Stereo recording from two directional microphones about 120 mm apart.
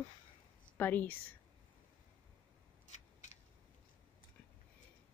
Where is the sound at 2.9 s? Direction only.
70° left (ahead or behind).